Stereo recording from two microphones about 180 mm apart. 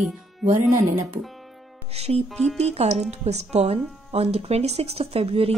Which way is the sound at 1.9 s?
35° right (ahead or behind).